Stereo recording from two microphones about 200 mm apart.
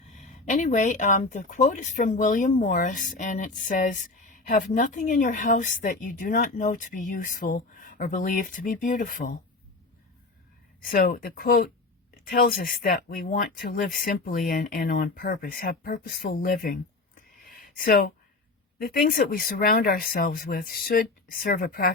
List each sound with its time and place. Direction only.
0.2 s speech: 40° left (ahead or behind)
10.8 s speech: 45° left (ahead or behind)
17.4 s a sound: 45° left (ahead or behind)
17.7 s speech: 45° left (ahead or behind)